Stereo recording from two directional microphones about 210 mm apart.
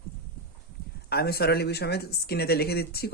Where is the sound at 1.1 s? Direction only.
50° left (ahead or behind).